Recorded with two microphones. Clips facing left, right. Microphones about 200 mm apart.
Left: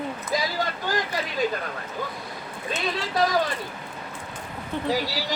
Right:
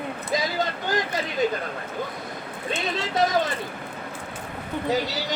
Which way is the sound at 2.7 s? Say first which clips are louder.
Right 1 dB; 20° right (ahead or behind).